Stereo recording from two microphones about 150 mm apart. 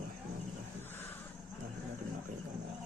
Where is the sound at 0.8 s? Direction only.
15° left (ahead or behind).